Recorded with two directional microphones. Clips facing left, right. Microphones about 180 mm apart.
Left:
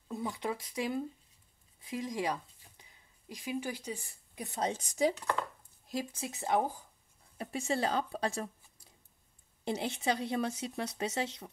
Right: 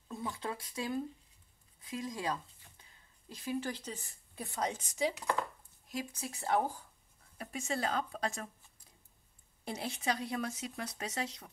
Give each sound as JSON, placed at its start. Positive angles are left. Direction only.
{"t": 0.1, "sound": "speech", "side_deg": 20}
{"t": 5.9, "sound": "speech", "side_deg": 25}
{"t": 7.3, "sound": "speech", "side_deg": 30}